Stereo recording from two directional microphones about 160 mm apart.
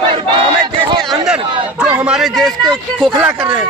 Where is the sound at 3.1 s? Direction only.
15° right (ahead or behind).